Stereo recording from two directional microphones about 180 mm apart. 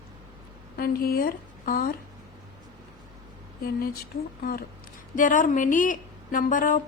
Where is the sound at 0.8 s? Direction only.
55° left (ahead or behind).